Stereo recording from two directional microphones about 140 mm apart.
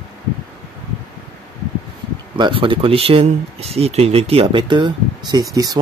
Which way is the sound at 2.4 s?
35° right (ahead or behind).